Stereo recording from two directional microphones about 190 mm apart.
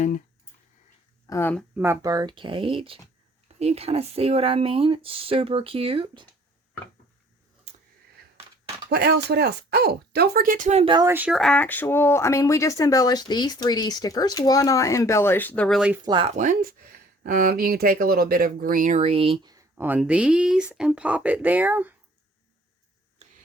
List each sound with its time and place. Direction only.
1.3 s speech: 10° left (ahead or behind)
1.7 s speech: 15° right (ahead or behind); by 6.2 s 30° right (ahead or behind)
8.9 s speech: 60° right (ahead or behind); by 11.1 s 25° right (ahead or behind)
11.1 s speech: 5° right (ahead or behind)
16.0 s speech: 25° right (ahead or behind)
16.3 s speech: 40° right (ahead or behind); by 21.9 s 10° right (ahead or behind)